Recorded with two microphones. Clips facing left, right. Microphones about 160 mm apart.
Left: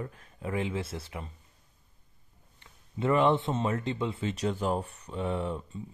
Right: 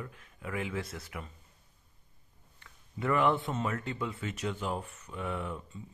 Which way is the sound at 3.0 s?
25° left (ahead or behind).